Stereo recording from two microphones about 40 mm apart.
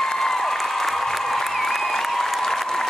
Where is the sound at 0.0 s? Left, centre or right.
Centre.